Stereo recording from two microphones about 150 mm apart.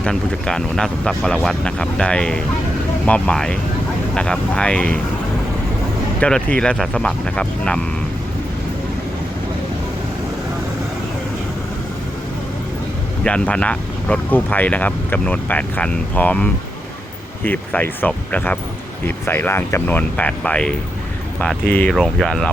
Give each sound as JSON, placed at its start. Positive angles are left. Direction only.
{"t": 0.0, "sound": "speech", "side_deg": 5}
{"t": 6.1, "sound": "speech", "side_deg": 5}
{"t": 13.2, "sound": "speech", "side_deg": 10}